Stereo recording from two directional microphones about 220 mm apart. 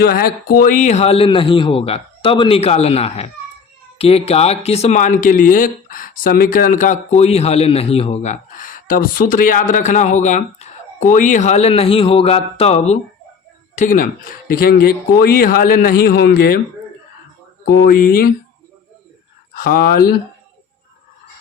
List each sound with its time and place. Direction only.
0.0 s speech: 45° left (ahead or behind)
17.7 s speech: 45° left (ahead or behind)
19.5 s speech: 40° left (ahead or behind)